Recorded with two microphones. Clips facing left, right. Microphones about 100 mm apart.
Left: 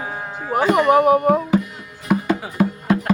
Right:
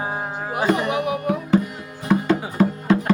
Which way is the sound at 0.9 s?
45° left (ahead or behind).